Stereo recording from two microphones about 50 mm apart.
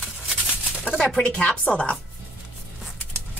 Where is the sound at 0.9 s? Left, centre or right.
Right.